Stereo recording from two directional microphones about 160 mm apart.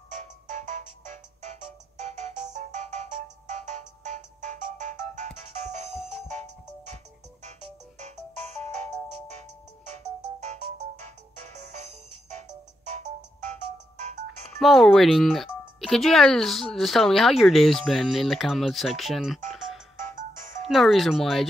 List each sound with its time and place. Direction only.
0.1 s music: 50° right (ahead or behind)
5.9 s music: 5° right (ahead or behind)
6.2 s music: 45° right (ahead or behind)
8.0 s music: 45° right (ahead or behind)
14.6 s speech: centre (ahead or behind)
20.2 s music: 55° right (ahead or behind)
20.6 s speech: centre (ahead or behind)